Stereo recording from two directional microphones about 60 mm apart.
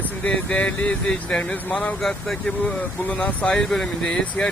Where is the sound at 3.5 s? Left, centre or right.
Centre.